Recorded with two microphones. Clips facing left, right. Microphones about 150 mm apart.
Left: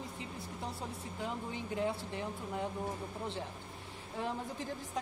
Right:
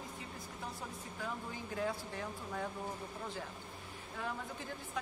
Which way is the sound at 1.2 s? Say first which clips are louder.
Left 3 dB; 25° left (ahead or behind).